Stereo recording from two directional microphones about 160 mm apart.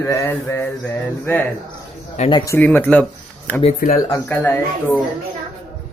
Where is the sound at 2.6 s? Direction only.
10° left (ahead or behind).